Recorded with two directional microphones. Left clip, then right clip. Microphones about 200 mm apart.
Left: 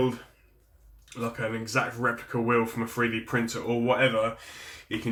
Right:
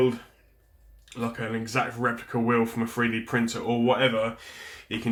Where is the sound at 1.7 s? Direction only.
35° right (ahead or behind).